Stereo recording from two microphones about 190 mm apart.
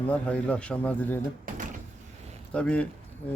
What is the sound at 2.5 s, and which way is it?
Speech, 5° left (ahead or behind).